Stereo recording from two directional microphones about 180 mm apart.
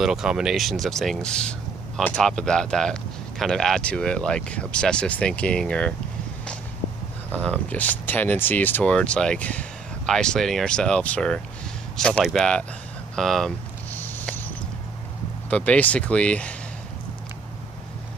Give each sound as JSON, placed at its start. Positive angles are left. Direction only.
{"t": 0.0, "sound": "speech", "side_deg": -5}
{"t": 7.3, "sound": "speech", "side_deg": 5}
{"t": 13.9, "sound": "a sound", "side_deg": 10}
{"t": 15.5, "sound": "speech", "side_deg": 5}